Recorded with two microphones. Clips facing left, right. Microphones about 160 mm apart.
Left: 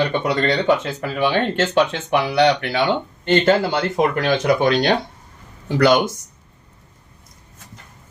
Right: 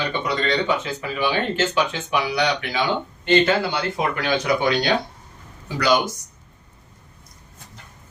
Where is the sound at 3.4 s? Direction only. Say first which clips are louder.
Left 4 dB; 45° left (ahead or behind).